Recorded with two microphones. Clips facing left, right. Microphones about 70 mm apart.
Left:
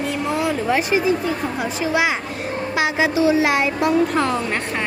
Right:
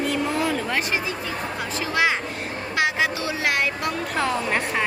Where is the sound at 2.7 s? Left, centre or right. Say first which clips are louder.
Left 2 dB; centre.